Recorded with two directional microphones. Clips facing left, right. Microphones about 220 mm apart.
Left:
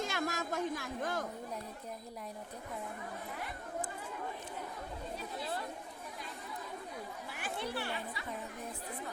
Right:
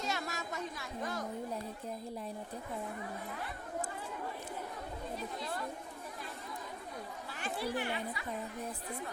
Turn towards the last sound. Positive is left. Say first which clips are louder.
# right 3 dB
turn(degrees=-15)  # may be behind; listen again after turning